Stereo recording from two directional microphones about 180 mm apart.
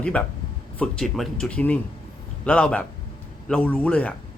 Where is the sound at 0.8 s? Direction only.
Centre (ahead or behind).